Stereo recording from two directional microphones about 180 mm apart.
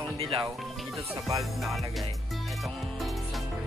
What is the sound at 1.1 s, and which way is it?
Music, 20° right (ahead or behind).